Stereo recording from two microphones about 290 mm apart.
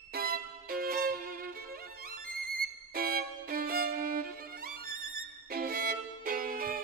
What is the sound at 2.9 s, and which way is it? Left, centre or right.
Violin, right.